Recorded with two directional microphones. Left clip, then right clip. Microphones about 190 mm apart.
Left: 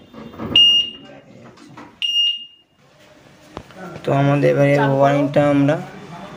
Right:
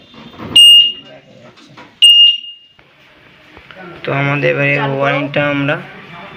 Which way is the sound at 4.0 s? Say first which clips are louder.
Right 2 dB; 20° left (ahead or behind).